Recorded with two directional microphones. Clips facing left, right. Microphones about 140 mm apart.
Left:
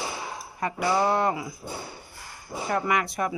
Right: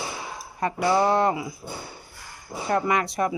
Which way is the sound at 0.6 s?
25° right (ahead or behind).